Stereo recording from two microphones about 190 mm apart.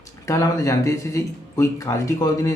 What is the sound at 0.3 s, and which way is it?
Speech, 15° left (ahead or behind).